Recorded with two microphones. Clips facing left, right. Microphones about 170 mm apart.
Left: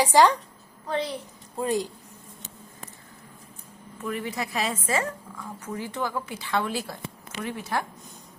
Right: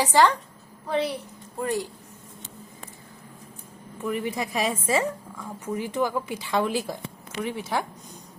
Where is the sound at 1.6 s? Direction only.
15° left (ahead or behind).